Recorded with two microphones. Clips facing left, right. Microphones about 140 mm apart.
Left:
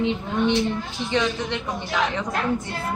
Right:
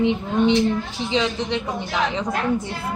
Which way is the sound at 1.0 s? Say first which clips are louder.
Right 1 dB; 20° right (ahead or behind).